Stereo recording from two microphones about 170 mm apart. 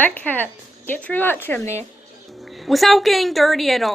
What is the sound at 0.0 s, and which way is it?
Speech, 10° left (ahead or behind).